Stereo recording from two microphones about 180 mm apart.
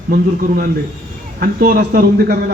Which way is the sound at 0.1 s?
55° right (ahead or behind).